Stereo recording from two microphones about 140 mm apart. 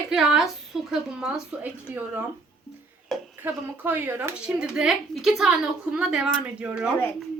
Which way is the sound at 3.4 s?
15° right (ahead or behind).